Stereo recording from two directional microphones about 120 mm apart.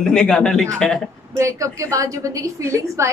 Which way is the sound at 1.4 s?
25° right (ahead or behind).